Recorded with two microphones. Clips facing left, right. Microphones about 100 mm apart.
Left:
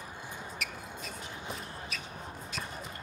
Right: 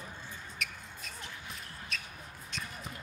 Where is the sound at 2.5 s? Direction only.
Centre (ahead or behind).